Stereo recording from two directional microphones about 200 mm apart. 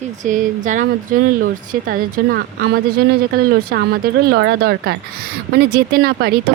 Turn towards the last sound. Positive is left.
turn(degrees=-50)  # may be behind; listen again after turning